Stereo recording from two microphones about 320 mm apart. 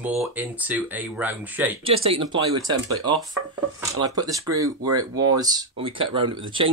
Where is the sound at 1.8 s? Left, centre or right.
Centre.